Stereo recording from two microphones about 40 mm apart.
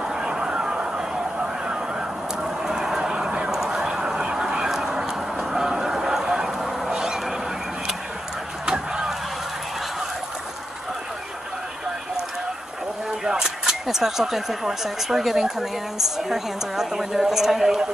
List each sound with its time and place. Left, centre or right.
0.1 s a sound: centre
8.6 s vehicle: centre
13.2 s a woman's voice: centre